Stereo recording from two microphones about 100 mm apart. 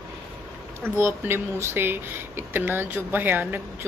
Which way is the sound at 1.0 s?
25° right (ahead or behind).